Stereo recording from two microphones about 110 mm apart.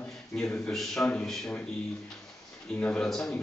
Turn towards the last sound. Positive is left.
turn(degrees=5)  # may be behind; listen again after turning